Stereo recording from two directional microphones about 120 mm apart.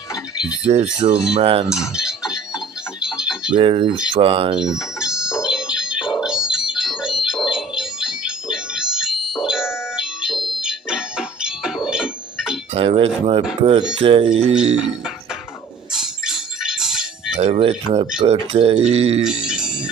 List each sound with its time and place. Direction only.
0.7 s speech: 60° right (ahead or behind)
1.7 s a sound: 5° right (ahead or behind)
3.6 s speech: 50° right (ahead or behind)
4.6 s music: 5° right (ahead or behind)
12.7 s speech: 55° right (ahead or behind)
14.8 s music: 5° right (ahead or behind)
17.3 s speech: 65° right (ahead or behind)
19.2 s music: 5° right (ahead or behind)